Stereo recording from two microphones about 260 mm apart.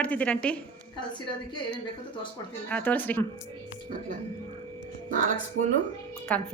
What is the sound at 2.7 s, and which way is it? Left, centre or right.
Speech, centre.